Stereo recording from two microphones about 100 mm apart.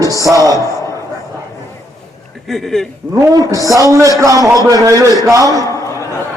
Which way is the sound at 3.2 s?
35° right (ahead or behind).